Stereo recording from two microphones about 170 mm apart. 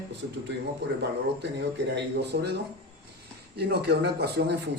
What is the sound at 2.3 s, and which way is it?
A man's voice, 80° right.